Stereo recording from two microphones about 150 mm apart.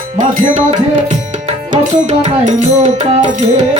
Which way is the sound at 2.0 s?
50° right (ahead or behind).